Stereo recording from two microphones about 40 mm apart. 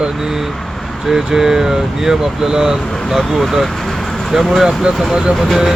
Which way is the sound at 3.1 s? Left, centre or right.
Centre.